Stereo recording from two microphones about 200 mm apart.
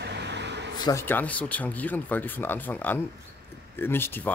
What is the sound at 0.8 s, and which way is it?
Speech, 15° left (ahead or behind).